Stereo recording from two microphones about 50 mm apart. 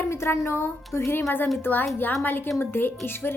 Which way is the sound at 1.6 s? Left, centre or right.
Left.